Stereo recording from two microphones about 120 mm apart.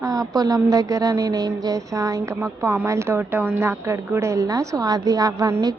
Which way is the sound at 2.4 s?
15° right (ahead or behind).